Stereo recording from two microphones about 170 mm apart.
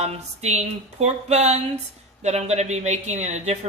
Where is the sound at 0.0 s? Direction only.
40° right (ahead or behind).